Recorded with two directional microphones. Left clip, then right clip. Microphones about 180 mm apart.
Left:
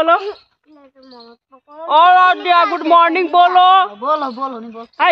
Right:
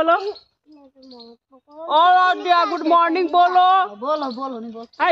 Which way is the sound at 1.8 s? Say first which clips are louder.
Left 5 dB; 15° left (ahead or behind).